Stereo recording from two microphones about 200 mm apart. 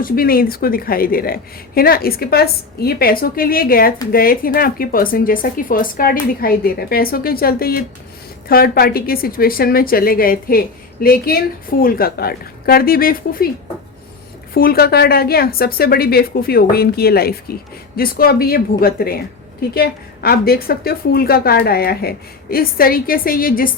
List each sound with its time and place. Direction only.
0.0 s a woman's voice: 45° left (ahead or behind)
14.5 s a woman's voice: 50° left (ahead or behind)